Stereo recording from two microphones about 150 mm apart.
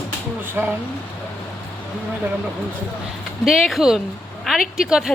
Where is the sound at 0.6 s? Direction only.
15° right (ahead or behind).